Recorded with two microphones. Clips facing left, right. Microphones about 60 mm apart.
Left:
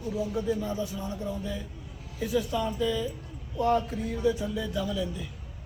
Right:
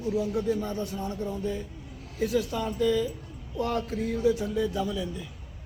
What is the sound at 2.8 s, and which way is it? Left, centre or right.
Speech, right.